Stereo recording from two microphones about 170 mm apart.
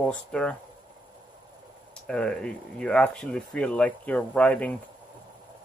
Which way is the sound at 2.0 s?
5° left (ahead or behind).